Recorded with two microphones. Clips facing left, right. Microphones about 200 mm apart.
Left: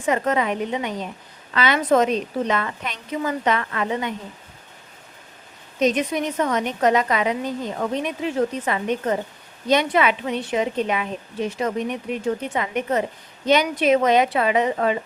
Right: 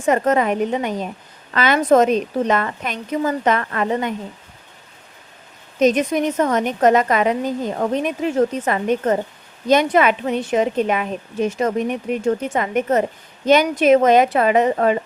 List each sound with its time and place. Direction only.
0.0 s a woman's voice: 45° right (ahead or behind)
5.8 s a woman's voice: 45° right (ahead or behind)